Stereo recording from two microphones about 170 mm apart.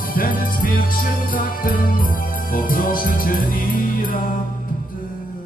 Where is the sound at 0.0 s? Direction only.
55° left (ahead or behind).